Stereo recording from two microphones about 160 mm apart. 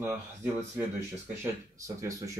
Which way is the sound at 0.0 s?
15° right (ahead or behind).